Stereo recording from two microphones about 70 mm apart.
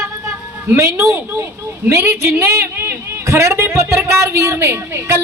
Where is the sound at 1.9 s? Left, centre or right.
Right.